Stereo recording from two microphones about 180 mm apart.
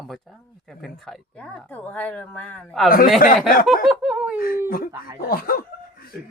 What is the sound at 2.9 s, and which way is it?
Speech, 50° left (ahead or behind).